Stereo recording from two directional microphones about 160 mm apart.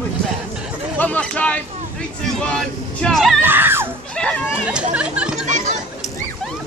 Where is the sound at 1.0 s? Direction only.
10° left (ahead or behind).